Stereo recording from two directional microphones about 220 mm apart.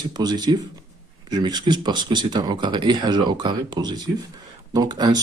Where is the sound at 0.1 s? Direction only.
20° right (ahead or behind).